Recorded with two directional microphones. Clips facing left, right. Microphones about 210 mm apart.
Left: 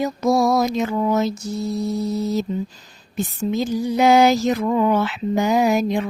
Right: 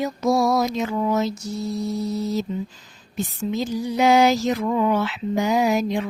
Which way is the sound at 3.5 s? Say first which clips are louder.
Left 3 dB; 50° left (ahead or behind).